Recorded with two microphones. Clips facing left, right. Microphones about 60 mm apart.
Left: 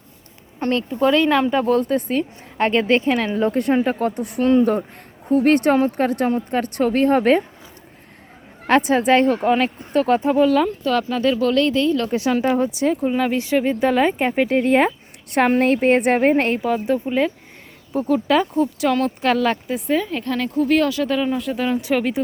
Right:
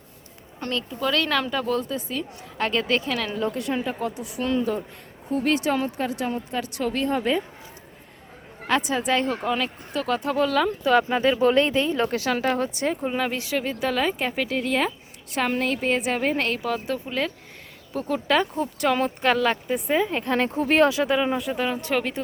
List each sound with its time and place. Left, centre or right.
0.6 s speech: left
1.1 s speech: left
2.6 s speech: left
5.3 s speech: left
8.6 s speech: left
10.2 s speech: centre
10.8 s speech: centre
12.5 s speech: centre
13.5 s speech: centre; by 16.2 s left
16.2 s speech: left
16.6 s speech: centre
19.9 s speech: centre
21.3 s speech: centre
21.8 s speech: centre